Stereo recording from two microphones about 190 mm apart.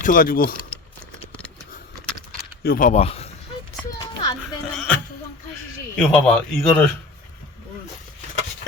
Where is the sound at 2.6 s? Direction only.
45° left (ahead or behind).